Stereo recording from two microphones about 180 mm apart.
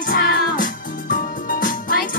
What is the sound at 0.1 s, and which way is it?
Music, 55° left (ahead or behind).